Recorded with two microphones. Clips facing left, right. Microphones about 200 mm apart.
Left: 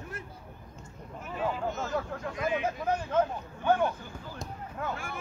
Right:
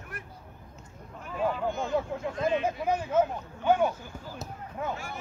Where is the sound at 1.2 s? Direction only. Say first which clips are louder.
Right 3 dB; 5° left (ahead or behind).